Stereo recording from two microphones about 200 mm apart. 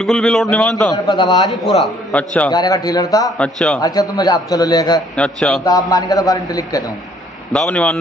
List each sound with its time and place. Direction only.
0.0 s a man's voice: centre (ahead or behind)
0.9 s a man's voice: 20° left (ahead or behind)
1.5 s a man's voice: centre (ahead or behind)
2.5 s a man's voice: 20° left (ahead or behind)
3.3 s a man's voice: 5° left (ahead or behind)
4.2 s a man's voice: 20° left (ahead or behind)
5.1 s a man's voice: 5° left (ahead or behind)
5.7 s a man's voice: 20° left (ahead or behind)
7.5 s a man's voice: 5° left (ahead or behind)